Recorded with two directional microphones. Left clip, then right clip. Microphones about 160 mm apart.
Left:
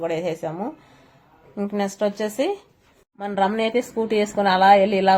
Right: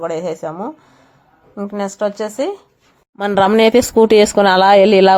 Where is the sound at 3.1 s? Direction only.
85° right.